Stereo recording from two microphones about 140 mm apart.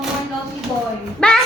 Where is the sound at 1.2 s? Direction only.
5° left (ahead or behind).